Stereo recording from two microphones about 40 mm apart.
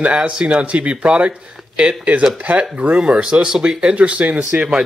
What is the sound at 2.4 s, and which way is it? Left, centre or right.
Speech, right.